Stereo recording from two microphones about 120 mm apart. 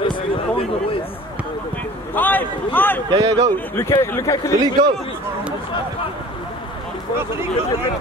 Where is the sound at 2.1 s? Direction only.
15° left (ahead or behind).